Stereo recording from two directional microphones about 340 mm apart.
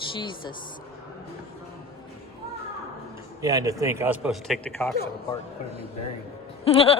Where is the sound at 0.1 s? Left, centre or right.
Centre.